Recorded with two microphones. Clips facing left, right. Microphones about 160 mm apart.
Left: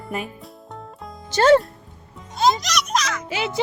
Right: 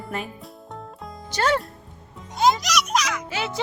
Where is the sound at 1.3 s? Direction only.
25° left (ahead or behind).